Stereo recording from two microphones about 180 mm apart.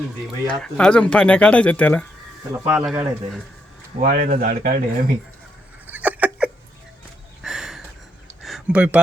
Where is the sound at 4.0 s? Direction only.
60° right (ahead or behind).